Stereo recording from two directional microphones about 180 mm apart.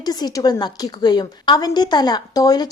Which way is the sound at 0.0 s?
20° left (ahead or behind).